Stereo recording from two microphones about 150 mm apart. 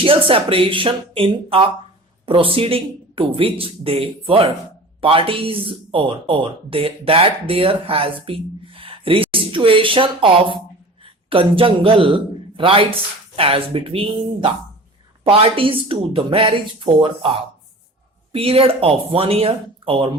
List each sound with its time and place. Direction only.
0.0 s speech: 35° right (ahead or behind)